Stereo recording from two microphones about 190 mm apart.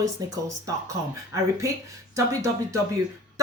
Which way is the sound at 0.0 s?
15° right (ahead or behind).